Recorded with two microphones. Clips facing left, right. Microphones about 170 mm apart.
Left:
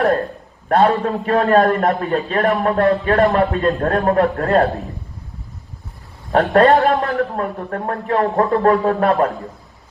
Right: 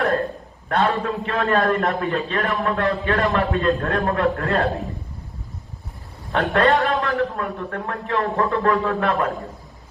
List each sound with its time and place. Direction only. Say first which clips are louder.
0.7 s a man's voice: left 6 dB; 40° left (ahead or behind)
6.3 s a man's voice: left 6 dB; 40° left (ahead or behind)